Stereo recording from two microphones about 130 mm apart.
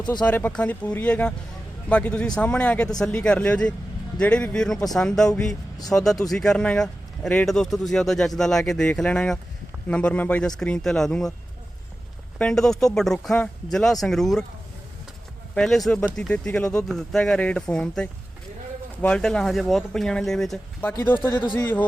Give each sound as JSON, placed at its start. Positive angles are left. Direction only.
{"t": 0.0, "sound": "speech", "side_deg": 35}
{"t": 0.3, "sound": "speech", "side_deg": 10}
{"t": 12.4, "sound": "speech", "side_deg": 5}
{"t": 15.5, "sound": "speech", "side_deg": 5}
{"t": 20.8, "sound": "speech", "side_deg": 15}